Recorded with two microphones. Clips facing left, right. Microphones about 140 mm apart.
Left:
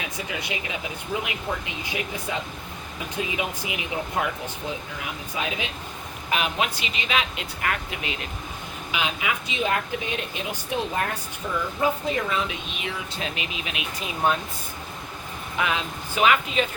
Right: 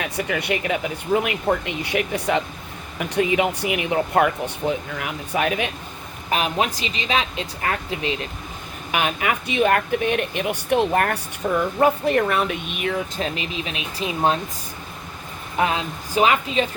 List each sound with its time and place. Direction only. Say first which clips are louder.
0.0 s speech: right 7 dB; 65° right (ahead or behind)
6.3 s speech: right 4 dB; 40° right (ahead or behind)
8.9 s speech: right 5 dB; 55° right (ahead or behind); by 14.3 s 30° right (ahead or behind)
15.5 s speech: right 5 dB; 35° right (ahead or behind)